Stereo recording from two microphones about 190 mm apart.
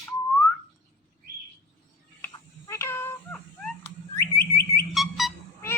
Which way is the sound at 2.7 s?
15° left (ahead or behind).